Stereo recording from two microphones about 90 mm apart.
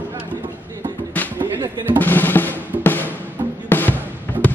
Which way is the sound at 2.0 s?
20° left (ahead or behind).